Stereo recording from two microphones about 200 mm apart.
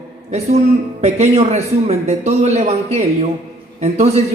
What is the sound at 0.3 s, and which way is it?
A man's voice, 35° right (ahead or behind).